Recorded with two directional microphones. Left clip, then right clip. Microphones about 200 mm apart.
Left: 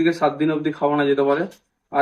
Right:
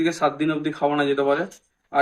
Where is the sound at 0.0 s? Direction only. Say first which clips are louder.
Left 3 dB; 15° right (ahead or behind).